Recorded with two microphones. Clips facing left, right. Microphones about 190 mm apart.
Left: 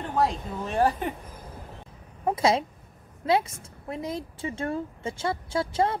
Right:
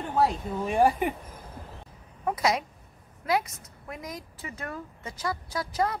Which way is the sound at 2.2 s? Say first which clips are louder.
Left 3 dB; 25° left (ahead or behind).